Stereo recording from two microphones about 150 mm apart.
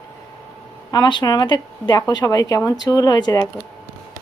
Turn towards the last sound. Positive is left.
turn(degrees=25)  # may be behind; listen again after turning